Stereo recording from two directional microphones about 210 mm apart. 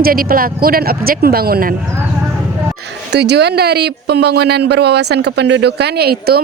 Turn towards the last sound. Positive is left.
turn(degrees=-50)  # may be behind; listen again after turning